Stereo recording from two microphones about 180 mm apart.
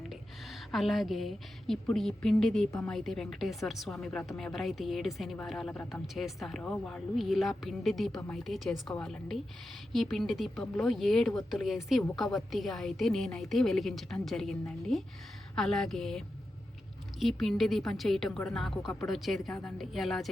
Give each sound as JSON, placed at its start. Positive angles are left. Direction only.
{"t": 0.1, "sound": "a woman's voice", "side_deg": 0}